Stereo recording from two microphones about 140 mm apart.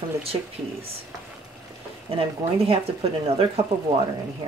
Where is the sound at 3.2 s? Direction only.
45° right (ahead or behind).